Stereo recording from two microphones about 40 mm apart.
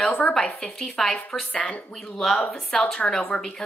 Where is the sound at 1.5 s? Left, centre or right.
Left.